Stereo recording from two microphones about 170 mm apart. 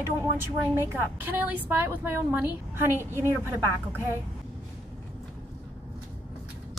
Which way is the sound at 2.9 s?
15° left (ahead or behind).